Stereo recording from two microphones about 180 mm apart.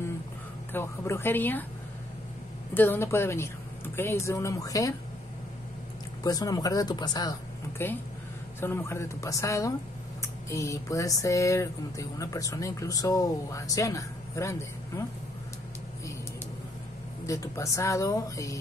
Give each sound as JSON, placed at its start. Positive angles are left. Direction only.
{"t": 0.7, "sound": "speech", "side_deg": 15}
{"t": 2.7, "sound": "speech", "side_deg": 10}
{"t": 6.2, "sound": "speech", "side_deg": 20}
{"t": 8.5, "sound": "speech", "side_deg": 10}
{"t": 17.3, "sound": "speech", "side_deg": 15}